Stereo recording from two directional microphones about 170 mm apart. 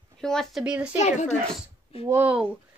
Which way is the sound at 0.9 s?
45° left (ahead or behind).